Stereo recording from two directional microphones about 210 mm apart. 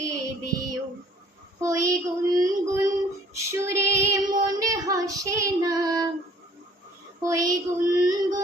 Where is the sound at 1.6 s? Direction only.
15° right (ahead or behind).